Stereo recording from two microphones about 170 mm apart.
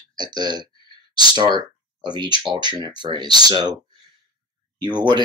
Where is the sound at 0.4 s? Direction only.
25° right (ahead or behind).